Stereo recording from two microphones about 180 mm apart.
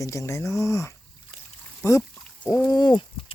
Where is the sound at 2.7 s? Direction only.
25° left (ahead or behind).